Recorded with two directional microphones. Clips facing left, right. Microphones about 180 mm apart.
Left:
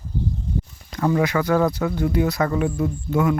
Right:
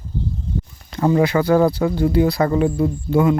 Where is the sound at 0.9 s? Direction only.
30° right (ahead or behind).